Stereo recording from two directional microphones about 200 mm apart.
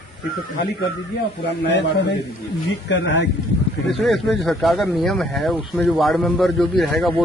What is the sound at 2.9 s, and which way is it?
Speech, 65° left (ahead or behind).